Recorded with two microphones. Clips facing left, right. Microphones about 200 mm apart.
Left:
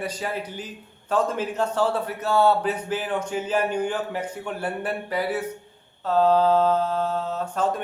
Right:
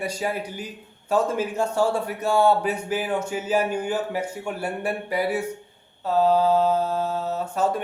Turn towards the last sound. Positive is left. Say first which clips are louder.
# right 1 dB
turn(degrees=-10)  # may be behind; listen again after turning